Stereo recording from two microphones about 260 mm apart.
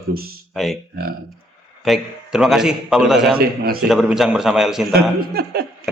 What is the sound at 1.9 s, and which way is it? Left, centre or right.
A man's voice, centre.